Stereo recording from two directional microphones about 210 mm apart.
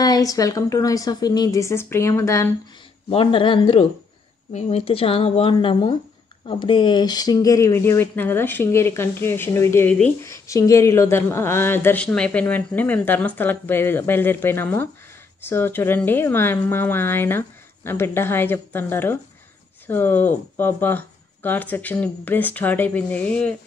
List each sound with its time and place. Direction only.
0.0 s speech: 15° left (ahead or behind)
3.1 s a woman's voice: 25° left (ahead or behind); by 23.5 s 5° left (ahead or behind)